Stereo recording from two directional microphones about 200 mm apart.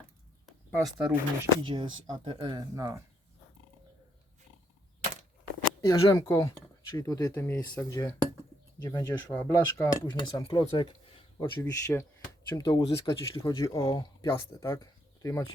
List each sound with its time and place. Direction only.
0.4 s a sound: centre (ahead or behind)
1.5 s speech: 25° right (ahead or behind)
5.8 s speech: 15° left (ahead or behind)
11.6 s speech: 10° left (ahead or behind)